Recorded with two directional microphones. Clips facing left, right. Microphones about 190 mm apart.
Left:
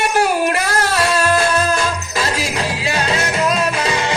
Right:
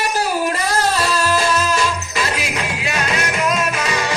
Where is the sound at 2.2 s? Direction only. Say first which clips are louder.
Left 3 dB; 35° left (ahead or behind).